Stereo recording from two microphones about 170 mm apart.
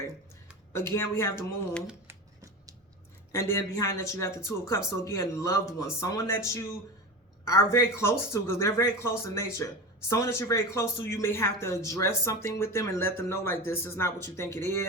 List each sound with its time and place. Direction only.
0.7 s speech: 15° left (ahead or behind)
1.9 s scissors: 15° right (ahead or behind)
3.3 s speech: 15° left (ahead or behind)